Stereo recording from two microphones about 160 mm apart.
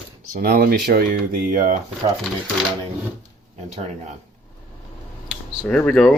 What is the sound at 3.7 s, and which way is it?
Speech, 45° right (ahead or behind).